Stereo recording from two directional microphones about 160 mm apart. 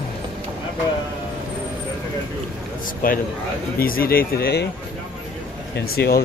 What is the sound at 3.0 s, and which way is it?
Speech, 65° left (ahead or behind).